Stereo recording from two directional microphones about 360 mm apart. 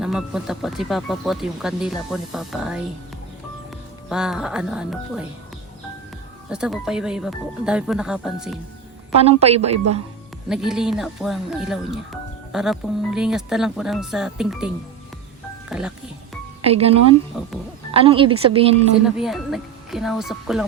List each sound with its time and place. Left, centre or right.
0.0 s speech: centre
4.1 s speech: centre
6.5 s speech: centre
9.1 s a woman's voice: centre
10.5 s speech: centre
15.7 s speech: centre
16.6 s a woman's voice: centre
17.3 s speech: centre
17.9 s a woman's voice: centre
19.0 s speech: centre